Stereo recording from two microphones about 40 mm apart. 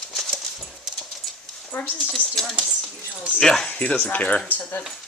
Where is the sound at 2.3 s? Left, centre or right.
Centre.